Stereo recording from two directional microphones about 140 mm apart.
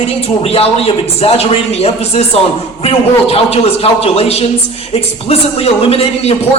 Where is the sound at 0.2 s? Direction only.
45° left (ahead or behind).